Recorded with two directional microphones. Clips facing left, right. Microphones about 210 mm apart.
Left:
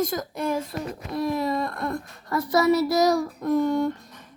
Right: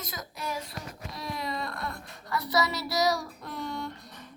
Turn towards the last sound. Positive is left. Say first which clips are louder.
# left 14 dB
turn(degrees=45)  # may be behind; listen again after turning